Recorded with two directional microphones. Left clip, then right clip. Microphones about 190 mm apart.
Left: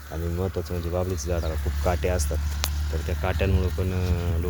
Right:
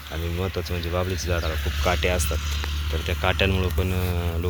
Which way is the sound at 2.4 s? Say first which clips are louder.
Right 2 dB; 60° left (ahead or behind).